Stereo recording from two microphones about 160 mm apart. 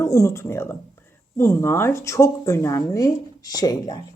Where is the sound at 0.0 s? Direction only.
15° left (ahead or behind).